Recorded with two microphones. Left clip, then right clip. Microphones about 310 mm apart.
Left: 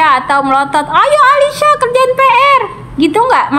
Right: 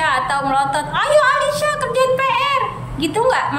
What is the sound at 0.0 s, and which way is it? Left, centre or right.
A woman's voice, centre.